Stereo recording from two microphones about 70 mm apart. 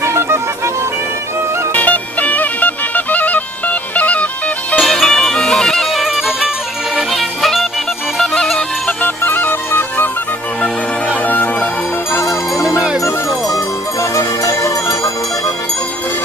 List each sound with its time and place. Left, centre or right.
0.0 s music: right
1.7 s music: left
4.8 s music: centre
8.5 s music: left
11.3 s music: left
12.1 s music: left